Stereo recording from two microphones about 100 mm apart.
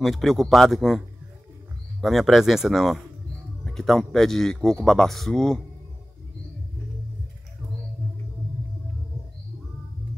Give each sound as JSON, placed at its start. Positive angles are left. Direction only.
{"t": 0.0, "sound": "speech", "side_deg": 0}